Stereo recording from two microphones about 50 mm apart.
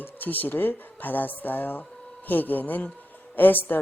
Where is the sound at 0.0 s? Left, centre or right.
Left.